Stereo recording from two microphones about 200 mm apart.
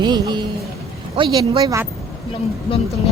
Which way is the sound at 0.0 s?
20° right (ahead or behind).